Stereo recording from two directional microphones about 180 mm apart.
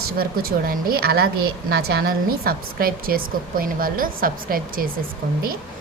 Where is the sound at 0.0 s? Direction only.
55° right (ahead or behind).